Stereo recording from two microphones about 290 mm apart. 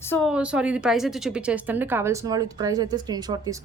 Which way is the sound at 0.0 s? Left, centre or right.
Centre.